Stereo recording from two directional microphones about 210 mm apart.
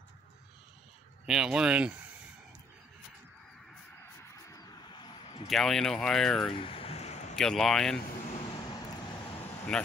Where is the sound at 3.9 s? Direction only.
10° left (ahead or behind).